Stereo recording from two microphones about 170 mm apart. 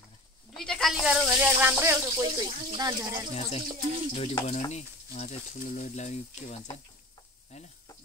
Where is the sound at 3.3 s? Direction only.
40° left (ahead or behind).